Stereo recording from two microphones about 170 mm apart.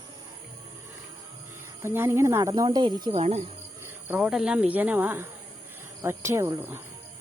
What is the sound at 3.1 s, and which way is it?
Speech, 35° right (ahead or behind).